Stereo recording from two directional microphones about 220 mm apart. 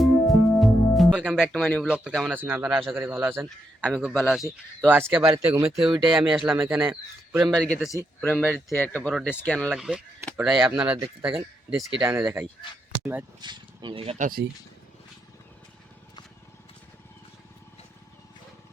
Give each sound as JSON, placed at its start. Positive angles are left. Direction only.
{"t": 0.0, "sound": "music", "side_deg": 0}
{"t": 1.9, "sound": "speech", "side_deg": 0}
{"t": 13.4, "sound": "speech", "side_deg": -20}